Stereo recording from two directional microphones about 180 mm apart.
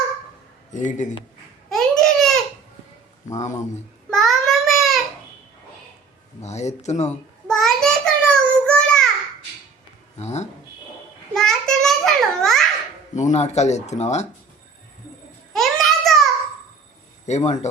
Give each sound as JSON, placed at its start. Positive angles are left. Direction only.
{"t": 0.7, "sound": "speech", "side_deg": 45}
{"t": 1.7, "sound": "babbling", "side_deg": 0}
{"t": 3.3, "sound": "speech", "side_deg": 40}
{"t": 4.1, "sound": "a sound", "side_deg": 0}
{"t": 6.4, "sound": "speech", "side_deg": 40}
{"t": 7.4, "sound": "child singing", "side_deg": 5}
{"t": 10.2, "sound": "speech", "side_deg": 40}
{"t": 11.3, "sound": "a sound", "side_deg": 5}
{"t": 13.1, "sound": "speech", "side_deg": 40}
{"t": 15.5, "sound": "a sound", "side_deg": 0}
{"t": 17.2, "sound": "a man's voice", "side_deg": 40}